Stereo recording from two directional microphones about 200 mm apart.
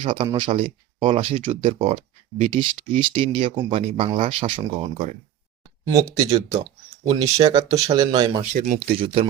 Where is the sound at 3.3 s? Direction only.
25° right (ahead or behind).